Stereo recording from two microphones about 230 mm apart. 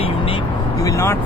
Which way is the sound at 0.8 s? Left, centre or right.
Centre.